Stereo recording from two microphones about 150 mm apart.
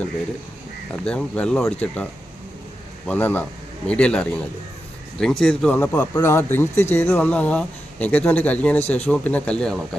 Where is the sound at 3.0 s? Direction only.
10° left (ahead or behind).